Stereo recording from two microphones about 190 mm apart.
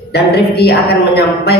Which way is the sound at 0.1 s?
60° left (ahead or behind).